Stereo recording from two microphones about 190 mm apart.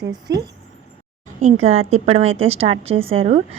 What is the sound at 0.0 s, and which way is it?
Speech, 20° right (ahead or behind).